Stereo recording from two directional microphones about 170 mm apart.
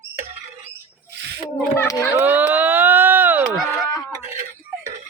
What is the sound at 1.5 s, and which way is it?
Speech, 10° left (ahead or behind).